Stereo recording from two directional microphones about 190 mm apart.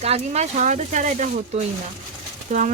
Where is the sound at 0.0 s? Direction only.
35° right (ahead or behind).